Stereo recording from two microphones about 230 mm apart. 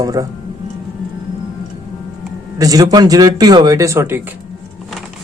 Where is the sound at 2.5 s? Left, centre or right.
Centre.